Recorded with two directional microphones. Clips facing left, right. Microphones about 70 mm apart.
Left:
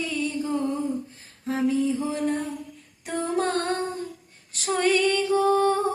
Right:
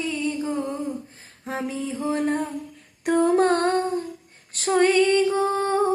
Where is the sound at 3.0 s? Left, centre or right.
Right.